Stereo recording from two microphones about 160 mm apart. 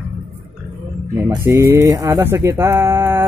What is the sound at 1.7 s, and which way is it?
Speech, 20° right (ahead or behind).